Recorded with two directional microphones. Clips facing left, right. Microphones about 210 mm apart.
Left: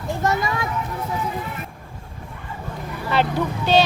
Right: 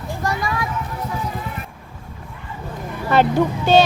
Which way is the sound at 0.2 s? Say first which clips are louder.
Left 1 dB; 25° left (ahead or behind).